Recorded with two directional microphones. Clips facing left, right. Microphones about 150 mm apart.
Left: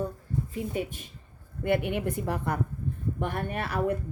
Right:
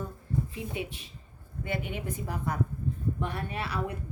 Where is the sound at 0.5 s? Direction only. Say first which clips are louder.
Left 4 dB; 45° left (ahead or behind).